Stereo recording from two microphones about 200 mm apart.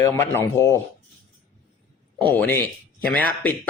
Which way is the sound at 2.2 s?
10° left (ahead or behind).